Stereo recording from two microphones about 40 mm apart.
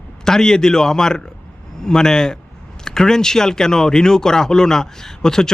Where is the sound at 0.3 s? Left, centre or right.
Centre.